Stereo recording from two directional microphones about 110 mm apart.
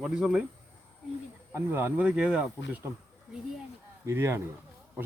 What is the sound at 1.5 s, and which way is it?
Speech, 20° right (ahead or behind).